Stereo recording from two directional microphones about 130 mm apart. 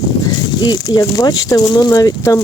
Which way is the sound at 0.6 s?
35° left (ahead or behind).